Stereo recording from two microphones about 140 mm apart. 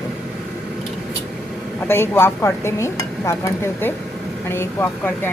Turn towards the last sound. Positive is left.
turn(degrees=15)  # may be behind; listen again after turning